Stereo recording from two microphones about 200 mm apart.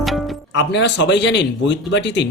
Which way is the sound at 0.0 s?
Centre (ahead or behind).